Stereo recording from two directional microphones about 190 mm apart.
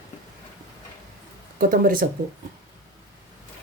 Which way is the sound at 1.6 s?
45° right (ahead or behind).